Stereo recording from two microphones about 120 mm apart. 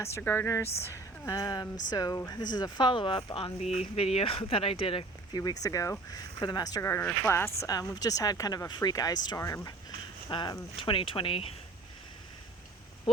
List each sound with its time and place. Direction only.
0.2 s speech: 20° left (ahead or behind); by 5.0 s 50° left (ahead or behind)
5.3 s speech: 30° left (ahead or behind)
6.8 s speech: 20° left (ahead or behind); by 11.5 s 50° left (ahead or behind)